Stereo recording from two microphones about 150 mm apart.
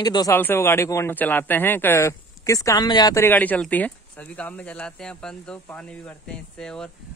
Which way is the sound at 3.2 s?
10° left (ahead or behind).